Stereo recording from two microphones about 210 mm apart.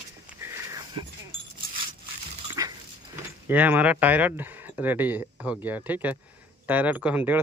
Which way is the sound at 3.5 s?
10° right (ahead or behind).